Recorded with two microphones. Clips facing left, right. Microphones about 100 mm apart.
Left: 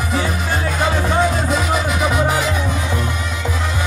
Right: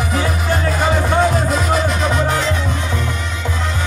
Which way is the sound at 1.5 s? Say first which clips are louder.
Right 1 dB; 5° left (ahead or behind).